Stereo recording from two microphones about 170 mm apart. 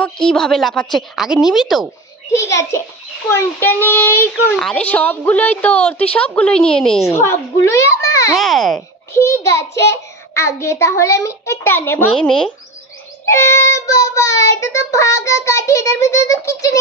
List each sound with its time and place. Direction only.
0.0 s a woman's voice: 5° left (ahead or behind)
2.3 s child singing: 15° left (ahead or behind)
6.1 s a woman's voice: 5° left (ahead or behind)
7.1 s child singing: 15° left (ahead or behind)
8.4 s a woman's voice: centre (ahead or behind)
9.1 s child singing: 15° left (ahead or behind)
12.1 s a woman's voice: 5° left (ahead or behind)
13.2 s child singing: 15° left (ahead or behind)